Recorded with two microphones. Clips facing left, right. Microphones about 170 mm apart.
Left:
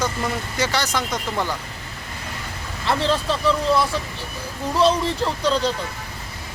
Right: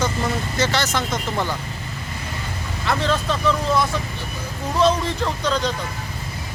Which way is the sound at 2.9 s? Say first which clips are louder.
Left 1 dB; 30° left (ahead or behind).